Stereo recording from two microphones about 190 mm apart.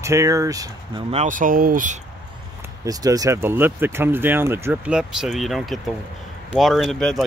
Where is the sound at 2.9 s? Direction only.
20° right (ahead or behind).